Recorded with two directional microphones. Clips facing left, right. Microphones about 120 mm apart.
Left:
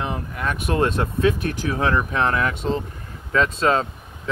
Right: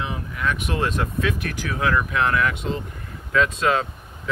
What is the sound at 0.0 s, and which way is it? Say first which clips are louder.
Speech: left 1 dB; 45° left (ahead or behind).